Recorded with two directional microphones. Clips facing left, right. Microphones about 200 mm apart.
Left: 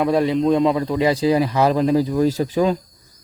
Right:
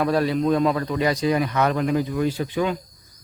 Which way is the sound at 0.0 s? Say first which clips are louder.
Left 3 dB; 25° left (ahead or behind).